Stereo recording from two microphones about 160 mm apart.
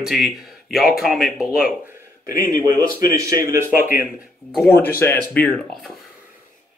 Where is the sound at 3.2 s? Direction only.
20° right (ahead or behind).